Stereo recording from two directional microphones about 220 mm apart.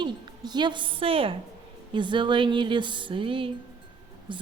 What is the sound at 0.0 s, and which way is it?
Speech, 20° right (ahead or behind).